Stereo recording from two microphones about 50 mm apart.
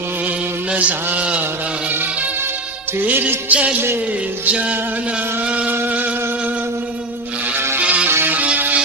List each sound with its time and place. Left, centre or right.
0.7 s a sound: right
3.0 s music: right
4.5 s music: right
7.5 s music: right
7.8 s music: right